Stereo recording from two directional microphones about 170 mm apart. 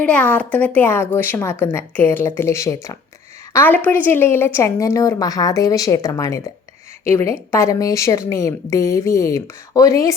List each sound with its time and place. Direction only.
0.0 s a woman's voice: 10° left (ahead or behind)